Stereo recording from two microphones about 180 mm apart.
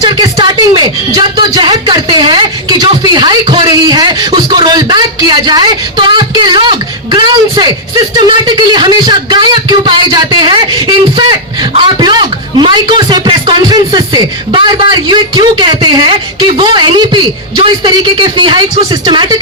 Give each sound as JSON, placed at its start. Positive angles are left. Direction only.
{"t": 0.0, "sound": "speech", "side_deg": -20}